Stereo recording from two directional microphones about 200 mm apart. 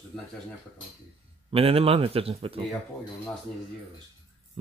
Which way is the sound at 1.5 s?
30° right (ahead or behind).